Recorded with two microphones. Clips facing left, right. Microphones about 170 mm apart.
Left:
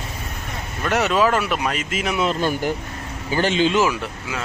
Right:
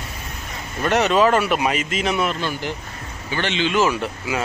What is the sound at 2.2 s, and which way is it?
A man's voice, 45° left (ahead or behind).